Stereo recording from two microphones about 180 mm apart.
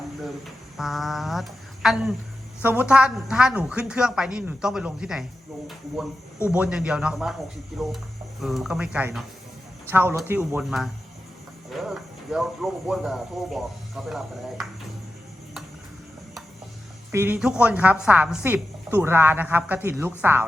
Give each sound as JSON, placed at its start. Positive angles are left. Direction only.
{"t": 0.8, "sound": "a sound", "side_deg": 0}
{"t": 2.6, "sound": "speech", "side_deg": -10}
{"t": 6.5, "sound": "a woman's voice", "side_deg": -5}
{"t": 17.1, "sound": "a woman's voice", "side_deg": -10}